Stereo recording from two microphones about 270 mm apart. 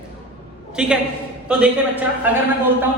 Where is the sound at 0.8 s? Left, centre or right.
Centre.